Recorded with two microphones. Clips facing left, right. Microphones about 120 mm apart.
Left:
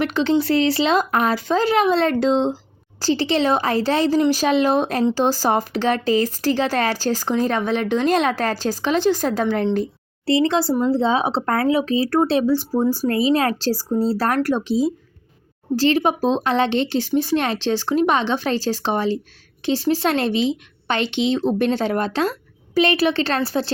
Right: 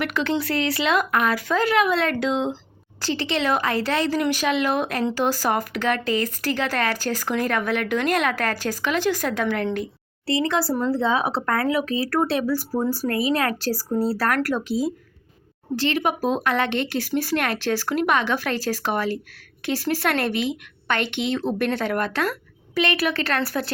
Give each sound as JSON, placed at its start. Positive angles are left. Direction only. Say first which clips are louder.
{"t": 0.0, "sound": "a woman's voice", "louder": "left 5 dB", "side_deg": 30}